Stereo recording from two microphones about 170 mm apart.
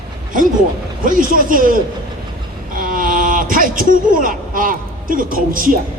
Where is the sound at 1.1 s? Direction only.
50° right (ahead or behind).